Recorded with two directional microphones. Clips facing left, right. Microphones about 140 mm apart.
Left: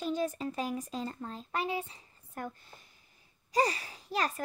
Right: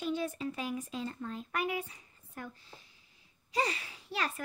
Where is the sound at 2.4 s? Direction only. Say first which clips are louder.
Left 4 dB; 50° left (ahead or behind).